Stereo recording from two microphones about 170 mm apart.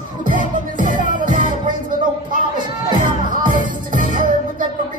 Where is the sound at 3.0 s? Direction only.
50° right (ahead or behind).